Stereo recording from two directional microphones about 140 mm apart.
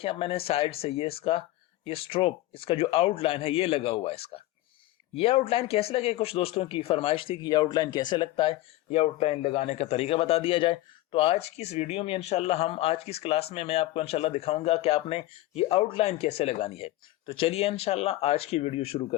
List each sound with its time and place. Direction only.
0.0 s speech: 40° left (ahead or behind)